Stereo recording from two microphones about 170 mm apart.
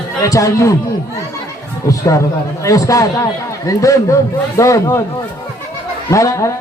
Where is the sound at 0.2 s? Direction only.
20° left (ahead or behind).